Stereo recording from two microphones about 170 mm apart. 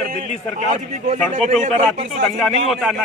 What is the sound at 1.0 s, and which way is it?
A man's voice, 45° right (ahead or behind).